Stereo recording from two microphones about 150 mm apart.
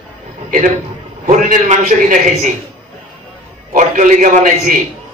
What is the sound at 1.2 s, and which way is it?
A man's voice, 60° right (ahead or behind).